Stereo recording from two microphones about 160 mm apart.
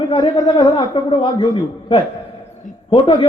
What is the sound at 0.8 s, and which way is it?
A man's voice, 35° left (ahead or behind).